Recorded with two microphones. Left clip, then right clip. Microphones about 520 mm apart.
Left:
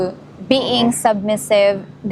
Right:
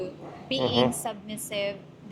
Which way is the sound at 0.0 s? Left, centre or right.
Left.